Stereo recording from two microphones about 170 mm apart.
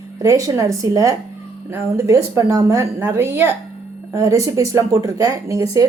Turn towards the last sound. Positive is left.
turn(degrees=-20)  # may be behind; listen again after turning